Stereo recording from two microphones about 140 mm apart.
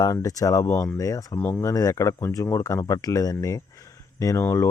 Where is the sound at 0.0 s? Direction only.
25° left (ahead or behind).